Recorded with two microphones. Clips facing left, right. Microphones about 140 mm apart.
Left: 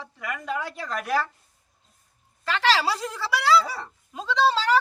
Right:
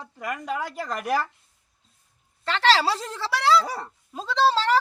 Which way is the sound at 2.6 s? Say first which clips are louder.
Right 2 dB; 35° right (ahead or behind).